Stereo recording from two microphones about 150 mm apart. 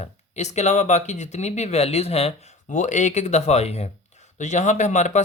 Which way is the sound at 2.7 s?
55° left (ahead or behind).